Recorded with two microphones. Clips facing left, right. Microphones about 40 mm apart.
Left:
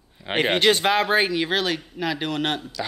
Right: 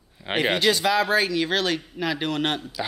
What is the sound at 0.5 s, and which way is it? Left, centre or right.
Speech, left.